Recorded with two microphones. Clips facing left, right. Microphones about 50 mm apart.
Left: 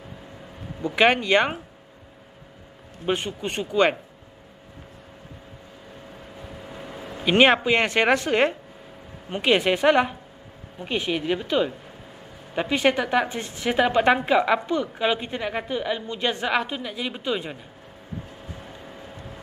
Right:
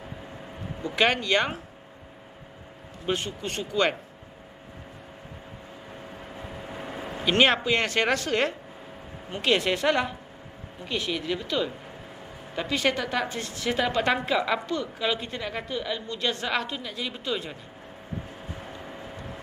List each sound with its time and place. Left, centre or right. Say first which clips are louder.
0.8 s a woman's voice: left 4 dB; centre
3.1 s a woman's voice: left 3 dB; centre
6.3 s vehicle: right 1 dB; right
7.2 s a woman's voice: left 4 dB; left
18.6 s vehicle: right 1 dB; centre